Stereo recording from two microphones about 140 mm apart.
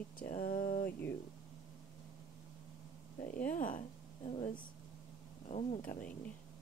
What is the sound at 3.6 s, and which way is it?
Speech, 70° left (ahead or behind).